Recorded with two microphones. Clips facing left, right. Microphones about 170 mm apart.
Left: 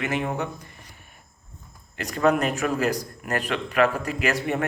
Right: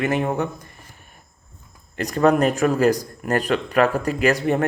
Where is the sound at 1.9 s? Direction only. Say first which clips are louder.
Right 4 dB; 40° right (ahead or behind).